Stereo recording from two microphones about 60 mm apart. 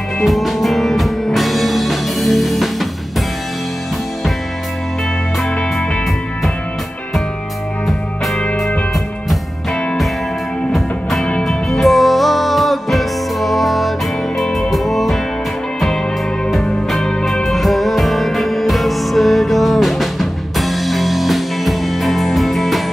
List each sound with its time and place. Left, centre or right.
0.2 s music: centre
8.4 s music: centre
10.7 s music: centre
16.6 s music: centre